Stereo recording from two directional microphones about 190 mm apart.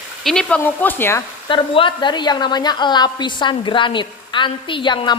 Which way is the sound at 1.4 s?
25° left (ahead or behind).